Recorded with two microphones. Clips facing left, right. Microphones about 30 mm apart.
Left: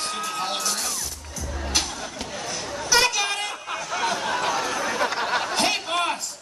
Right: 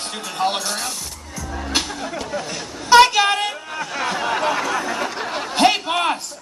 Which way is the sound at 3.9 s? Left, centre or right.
Right.